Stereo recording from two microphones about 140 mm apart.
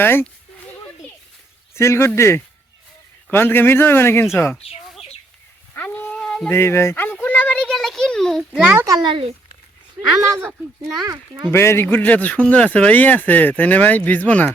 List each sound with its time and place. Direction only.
0.0 s a man's voice: 15° left (ahead or behind)
1.7 s a man's voice: 20° left (ahead or behind)
5.7 s a sound: 10° left (ahead or behind)
6.5 s a sound: 20° left (ahead or behind); by 8.9 s 10° right (ahead or behind)
8.9 s speech: 30° right (ahead or behind)
10.9 s speech: 30° right (ahead or behind)
11.5 s a man's voice: 20° left (ahead or behind)